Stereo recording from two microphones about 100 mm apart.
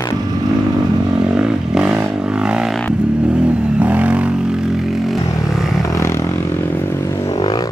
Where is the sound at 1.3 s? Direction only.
5° right (ahead or behind).